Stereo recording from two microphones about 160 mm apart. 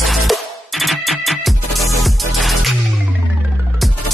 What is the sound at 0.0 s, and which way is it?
Music, centre (ahead or behind).